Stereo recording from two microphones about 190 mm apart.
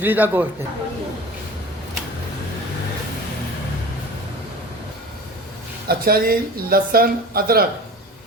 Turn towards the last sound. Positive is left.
turn(degrees=-50)  # may be behind; listen again after turning